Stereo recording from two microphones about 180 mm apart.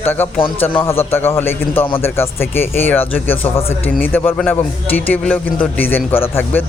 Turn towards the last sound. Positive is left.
turn(degrees=10)  # may be behind; listen again after turning